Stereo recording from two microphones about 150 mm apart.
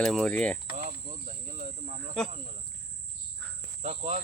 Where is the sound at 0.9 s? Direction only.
50° right (ahead or behind).